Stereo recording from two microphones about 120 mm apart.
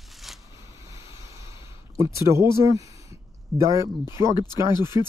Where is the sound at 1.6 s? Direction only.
25° right (ahead or behind).